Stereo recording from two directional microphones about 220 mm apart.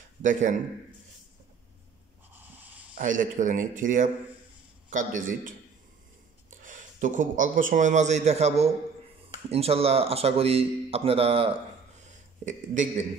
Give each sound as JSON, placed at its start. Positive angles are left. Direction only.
{"t": 0.2, "sound": "speech", "side_deg": -35}
{"t": 2.3, "sound": "snort", "side_deg": -10}
{"t": 3.0, "sound": "speech", "side_deg": -35}
{"t": 6.6, "sound": "a man's voice", "side_deg": -35}